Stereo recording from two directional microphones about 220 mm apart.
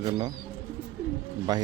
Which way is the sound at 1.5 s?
20° right (ahead or behind).